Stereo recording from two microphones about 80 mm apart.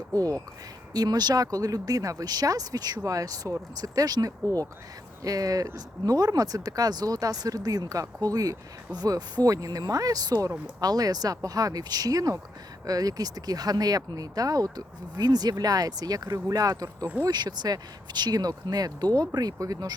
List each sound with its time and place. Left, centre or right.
0.1 s speech: right
17.2 s speech: right